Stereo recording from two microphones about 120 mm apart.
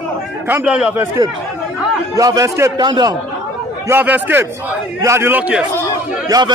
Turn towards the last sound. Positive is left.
turn(degrees=-30)  # may be behind; listen again after turning